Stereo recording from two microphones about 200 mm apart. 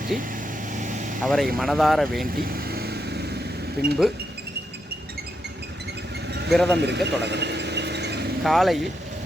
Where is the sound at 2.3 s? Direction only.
45° right (ahead or behind).